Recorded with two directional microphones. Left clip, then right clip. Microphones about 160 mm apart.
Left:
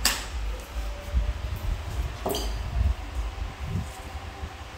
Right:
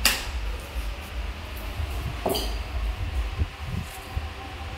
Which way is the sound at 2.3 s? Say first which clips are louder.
Right 3 dB; 25° right (ahead or behind).